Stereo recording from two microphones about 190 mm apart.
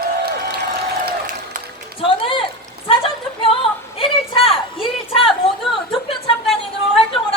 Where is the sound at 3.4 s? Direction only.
30° left (ahead or behind).